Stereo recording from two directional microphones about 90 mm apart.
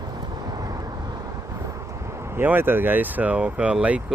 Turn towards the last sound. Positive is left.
turn(degrees=-15)  # may be behind; listen again after turning